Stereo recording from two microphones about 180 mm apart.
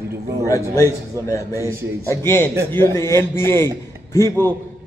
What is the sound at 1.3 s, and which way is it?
A man's voice, 15° left (ahead or behind).